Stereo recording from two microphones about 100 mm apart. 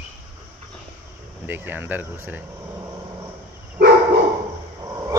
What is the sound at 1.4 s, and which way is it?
Speech, 20° right (ahead or behind).